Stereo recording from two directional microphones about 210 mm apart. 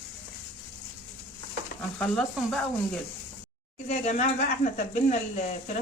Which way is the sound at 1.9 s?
5° left (ahead or behind).